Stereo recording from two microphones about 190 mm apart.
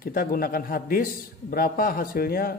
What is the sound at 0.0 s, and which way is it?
Speech, 50° left (ahead or behind).